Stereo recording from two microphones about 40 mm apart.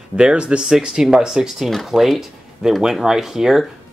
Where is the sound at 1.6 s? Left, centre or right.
Centre.